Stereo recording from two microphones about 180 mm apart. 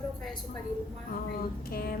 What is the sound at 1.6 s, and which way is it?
Speech, 55° left (ahead or behind).